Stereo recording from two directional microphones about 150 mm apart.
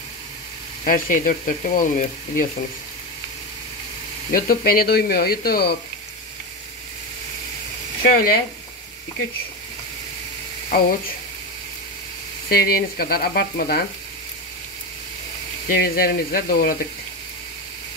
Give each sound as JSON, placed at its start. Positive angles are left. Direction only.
{"t": 0.8, "sound": "frying", "side_deg": 65}
{"t": 4.3, "sound": "speech", "side_deg": 70}
{"t": 8.0, "sound": "speech", "side_deg": 80}
{"t": 10.7, "sound": "speech", "side_deg": 70}
{"t": 12.4, "sound": "speech", "side_deg": 85}
{"t": 15.7, "sound": "speech", "side_deg": 85}